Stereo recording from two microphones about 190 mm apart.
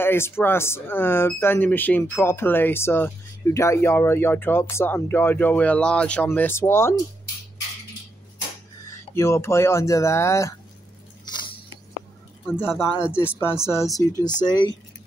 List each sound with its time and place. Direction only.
0.0 s speech: 10° left (ahead or behind)
8.8 s speech: 15° left (ahead or behind)
11.2 s a sound: 25° left (ahead or behind)
12.5 s speech: 10° left (ahead or behind)